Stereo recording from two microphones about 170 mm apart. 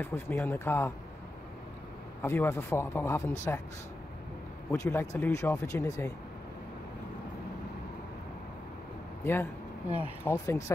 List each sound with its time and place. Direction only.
0.0 s speech: 10° left (ahead or behind)
2.2 s speech: 15° left (ahead or behind)
4.7 s speech: 20° left (ahead or behind)
9.2 s speech: 15° left (ahead or behind)
9.8 s speech: 10° right (ahead or behind)
10.2 s speech: 15° left (ahead or behind)